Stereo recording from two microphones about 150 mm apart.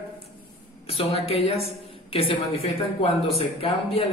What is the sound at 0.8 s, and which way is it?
A woman's voice, 40° left (ahead or behind).